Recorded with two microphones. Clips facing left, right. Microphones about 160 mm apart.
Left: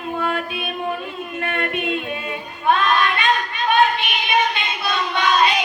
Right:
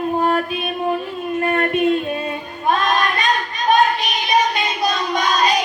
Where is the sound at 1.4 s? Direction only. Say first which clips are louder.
Right 6 dB; 40° right (ahead or behind).